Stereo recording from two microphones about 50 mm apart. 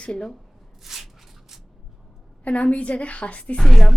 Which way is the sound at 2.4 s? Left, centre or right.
Left.